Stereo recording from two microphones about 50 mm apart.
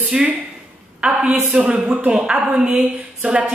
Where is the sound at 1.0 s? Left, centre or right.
Right.